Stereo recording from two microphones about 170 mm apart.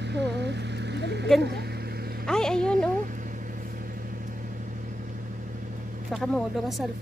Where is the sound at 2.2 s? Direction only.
5° left (ahead or behind).